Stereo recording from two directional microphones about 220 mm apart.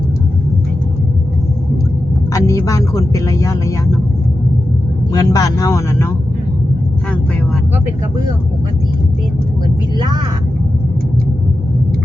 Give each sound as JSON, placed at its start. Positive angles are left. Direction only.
{"t": 2.3, "sound": "speech", "side_deg": 15}
{"t": 5.1, "sound": "speech", "side_deg": 15}
{"t": 10.0, "sound": "speech", "side_deg": -20}